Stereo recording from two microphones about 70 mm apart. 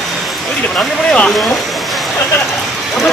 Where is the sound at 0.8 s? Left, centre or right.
Centre.